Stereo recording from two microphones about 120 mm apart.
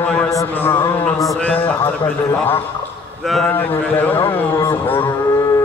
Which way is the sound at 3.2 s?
Centre (ahead or behind).